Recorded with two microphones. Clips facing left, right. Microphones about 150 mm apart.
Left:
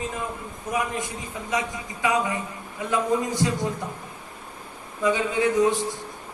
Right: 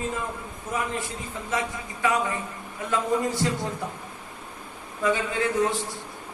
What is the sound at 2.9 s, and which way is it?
Speech, 15° left (ahead or behind).